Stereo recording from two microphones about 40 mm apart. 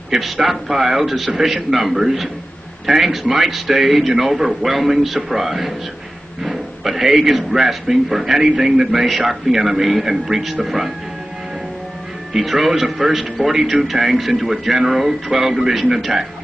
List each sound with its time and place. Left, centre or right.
0.1 s a man's voice: centre
6.4 s a sound: centre
7.2 s a man's voice: centre
12.4 s a man's voice: centre